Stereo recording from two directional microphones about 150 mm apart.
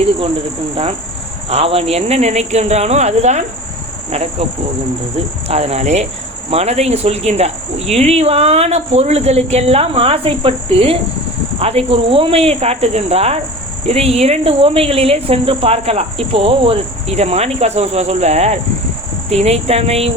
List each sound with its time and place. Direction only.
1.5 s speech: 40° right (ahead or behind)
5.5 s speech: 45° right (ahead or behind)